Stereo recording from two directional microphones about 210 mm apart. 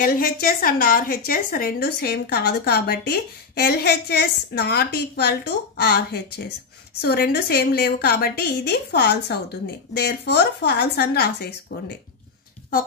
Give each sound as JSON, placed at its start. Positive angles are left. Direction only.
{"t": 0.0, "sound": "a woman's voice", "side_deg": 45}